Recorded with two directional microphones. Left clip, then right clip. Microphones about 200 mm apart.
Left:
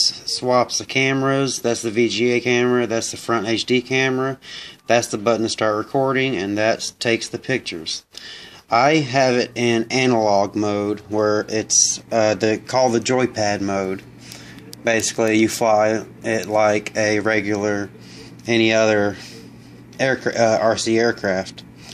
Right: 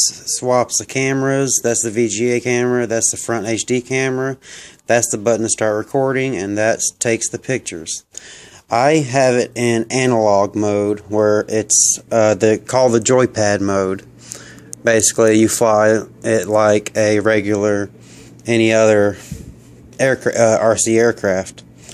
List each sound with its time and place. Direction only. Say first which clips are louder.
0.0 s speech: right 1 dB; 35° right (ahead or behind)